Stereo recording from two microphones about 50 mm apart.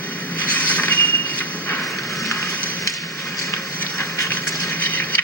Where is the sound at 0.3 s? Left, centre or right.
Left.